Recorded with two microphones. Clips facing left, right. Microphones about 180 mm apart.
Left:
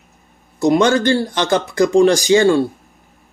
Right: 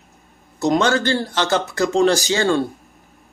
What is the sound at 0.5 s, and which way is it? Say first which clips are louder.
A man's voice: left 4 dB; 15° left (ahead or behind).